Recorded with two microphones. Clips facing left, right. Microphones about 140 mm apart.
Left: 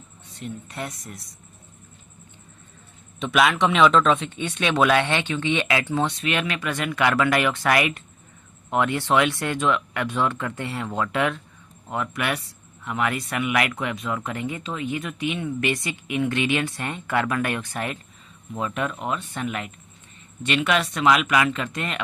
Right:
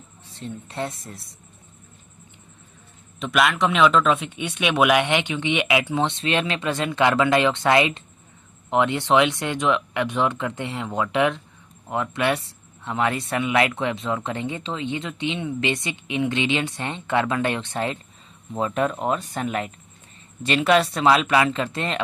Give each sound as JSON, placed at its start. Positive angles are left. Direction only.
{"t": 0.3, "sound": "speech", "side_deg": -30}
{"t": 3.2, "sound": "a man's voice", "side_deg": 0}
{"t": 6.1, "sound": "speech", "side_deg": -25}